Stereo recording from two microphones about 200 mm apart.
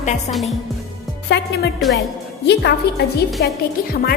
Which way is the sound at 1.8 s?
Centre (ahead or behind).